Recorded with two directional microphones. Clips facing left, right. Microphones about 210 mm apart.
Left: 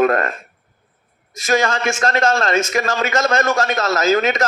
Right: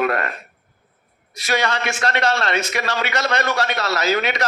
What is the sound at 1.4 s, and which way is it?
A man's voice, 45° left (ahead or behind).